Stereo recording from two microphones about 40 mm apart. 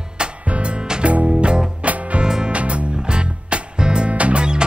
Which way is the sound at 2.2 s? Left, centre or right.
Centre.